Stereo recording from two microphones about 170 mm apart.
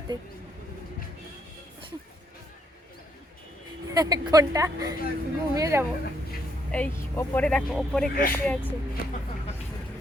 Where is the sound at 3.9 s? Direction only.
20° right (ahead or behind).